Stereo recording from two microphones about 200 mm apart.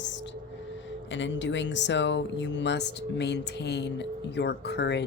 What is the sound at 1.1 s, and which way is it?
A man's voice, 65° left (ahead or behind).